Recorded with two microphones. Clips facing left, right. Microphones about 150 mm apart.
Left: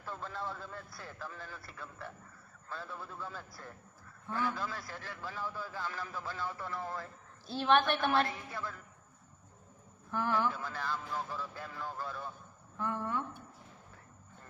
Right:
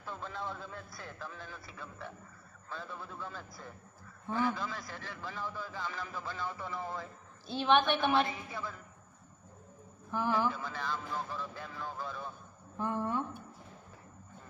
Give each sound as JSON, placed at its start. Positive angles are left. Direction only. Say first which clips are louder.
{"t": 0.0, "sound": "a man's voice", "louder": "even", "side_deg": 5}
{"t": 10.1, "sound": "a man's voice", "louder": "right 1 dB", "side_deg": -5}
{"t": 12.7, "sound": "a woman's voice", "louder": "right 2 dB", "side_deg": -20}